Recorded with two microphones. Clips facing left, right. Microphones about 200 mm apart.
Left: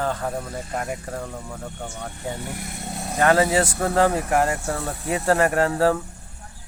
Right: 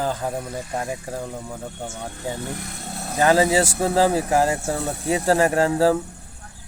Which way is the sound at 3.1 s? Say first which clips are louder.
Right 1 dB; 10° right (ahead or behind).